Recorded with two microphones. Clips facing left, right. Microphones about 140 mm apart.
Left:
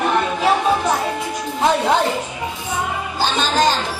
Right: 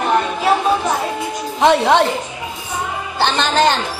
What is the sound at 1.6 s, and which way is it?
Speech, 75° right (ahead or behind).